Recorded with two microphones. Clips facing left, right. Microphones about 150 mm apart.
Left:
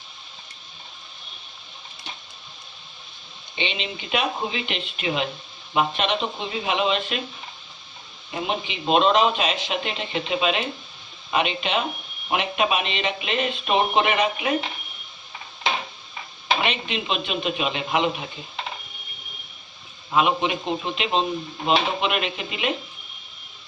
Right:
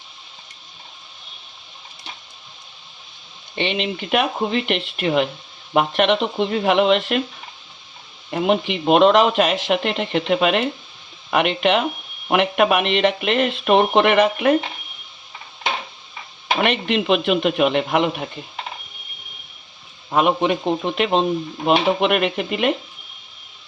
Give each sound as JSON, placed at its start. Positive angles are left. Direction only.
{"t": 3.5, "sound": "speech", "side_deg": -60}
{"t": 8.3, "sound": "speech", "side_deg": -65}
{"t": 16.6, "sound": "speech", "side_deg": -60}
{"t": 20.1, "sound": "a man's voice", "side_deg": -50}